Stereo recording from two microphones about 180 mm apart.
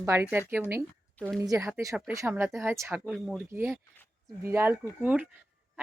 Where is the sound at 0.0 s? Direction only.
15° right (ahead or behind).